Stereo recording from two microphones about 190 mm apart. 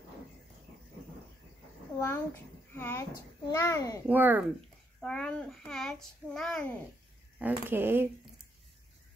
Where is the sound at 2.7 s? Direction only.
10° left (ahead or behind).